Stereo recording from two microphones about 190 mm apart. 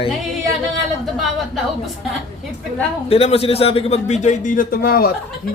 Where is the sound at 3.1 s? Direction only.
30° left (ahead or behind); by 5.1 s 50° left (ahead or behind).